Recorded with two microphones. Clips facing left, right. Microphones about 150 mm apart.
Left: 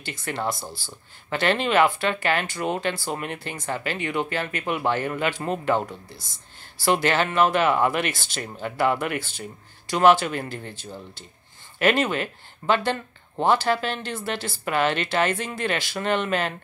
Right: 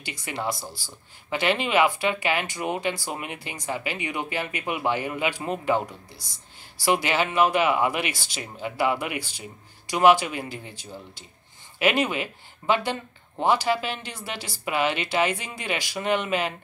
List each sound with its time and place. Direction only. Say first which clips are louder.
1.3 s speech: left 2 dB; 10° right (ahead or behind)
6.8 s speech: left 2 dB; 10° right (ahead or behind)
8.1 s speech: left 2 dB; 55° left (ahead or behind)
8.4 s speech: left 2 dB; 10° right (ahead or behind)